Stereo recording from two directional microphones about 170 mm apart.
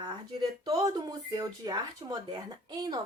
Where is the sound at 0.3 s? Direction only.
20° right (ahead or behind).